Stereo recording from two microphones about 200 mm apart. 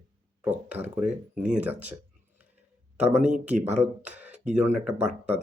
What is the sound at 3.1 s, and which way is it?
Speech, 35° right (ahead or behind).